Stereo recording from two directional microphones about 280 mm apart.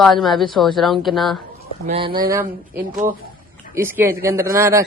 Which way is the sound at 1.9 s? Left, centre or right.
Centre.